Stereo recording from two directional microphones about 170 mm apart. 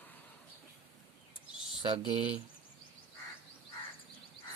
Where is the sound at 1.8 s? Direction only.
30° right (ahead or behind).